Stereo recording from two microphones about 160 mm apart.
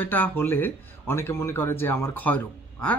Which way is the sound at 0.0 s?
10° left (ahead or behind).